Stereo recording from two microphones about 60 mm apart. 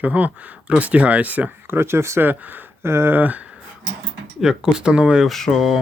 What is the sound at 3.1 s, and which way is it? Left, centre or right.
Speech, right.